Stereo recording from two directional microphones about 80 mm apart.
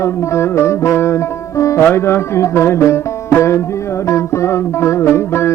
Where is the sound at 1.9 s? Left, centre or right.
Left.